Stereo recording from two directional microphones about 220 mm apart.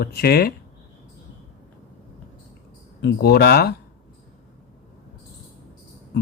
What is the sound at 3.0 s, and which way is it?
Speech, 50° left (ahead or behind).